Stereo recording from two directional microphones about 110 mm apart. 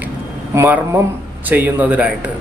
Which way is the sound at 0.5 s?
20° right (ahead or behind).